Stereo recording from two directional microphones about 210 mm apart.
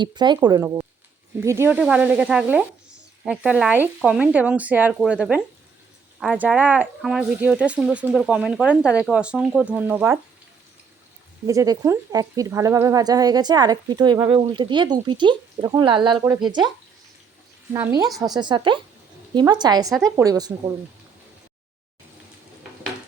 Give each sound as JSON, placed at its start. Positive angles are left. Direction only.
{"t": 0.0, "sound": "speech", "side_deg": -20}
{"t": 11.4, "sound": "speech", "side_deg": -15}
{"t": 17.7, "sound": "speech", "side_deg": -20}